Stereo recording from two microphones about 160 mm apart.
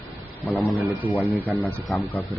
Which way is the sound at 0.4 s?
Centre (ahead or behind).